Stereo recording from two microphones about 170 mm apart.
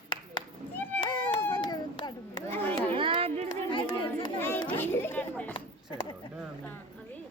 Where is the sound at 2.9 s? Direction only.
30° right (ahead or behind).